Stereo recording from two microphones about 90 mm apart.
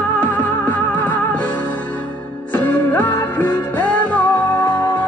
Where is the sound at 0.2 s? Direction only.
20° left (ahead or behind).